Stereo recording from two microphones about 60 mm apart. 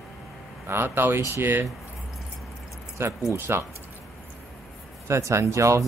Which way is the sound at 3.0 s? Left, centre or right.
Right.